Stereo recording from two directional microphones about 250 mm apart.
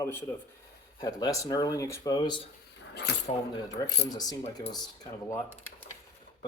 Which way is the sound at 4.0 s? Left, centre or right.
Centre.